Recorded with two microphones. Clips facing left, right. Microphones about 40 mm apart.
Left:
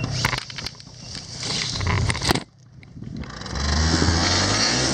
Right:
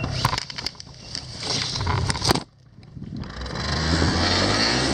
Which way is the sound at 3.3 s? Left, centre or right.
Centre.